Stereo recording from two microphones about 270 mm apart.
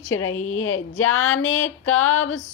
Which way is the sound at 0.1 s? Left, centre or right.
Left.